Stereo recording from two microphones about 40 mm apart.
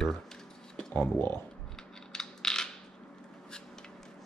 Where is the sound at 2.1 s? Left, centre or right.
Centre.